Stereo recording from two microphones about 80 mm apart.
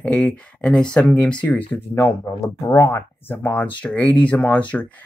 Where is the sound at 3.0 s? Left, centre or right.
Left.